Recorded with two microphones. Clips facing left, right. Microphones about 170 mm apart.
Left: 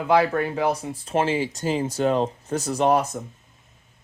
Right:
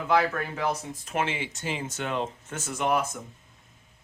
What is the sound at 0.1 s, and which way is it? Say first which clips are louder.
Speech: left 5 dB; 30° left (ahead or behind).